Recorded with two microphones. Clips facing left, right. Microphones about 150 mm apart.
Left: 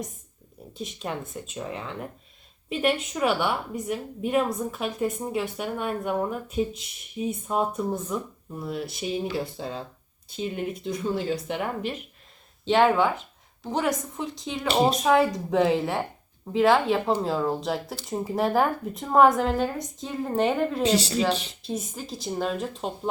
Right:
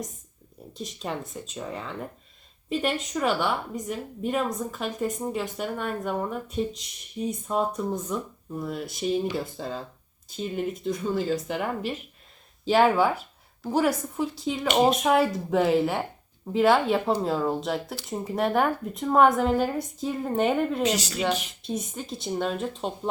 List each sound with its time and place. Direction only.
0.7 s a woman's voice: centre (ahead or behind)
14.7 s speech: 35° left (ahead or behind)
15.0 s a woman's voice: centre (ahead or behind)
20.8 s speech: 30° left (ahead or behind)
21.6 s a woman's voice: centre (ahead or behind)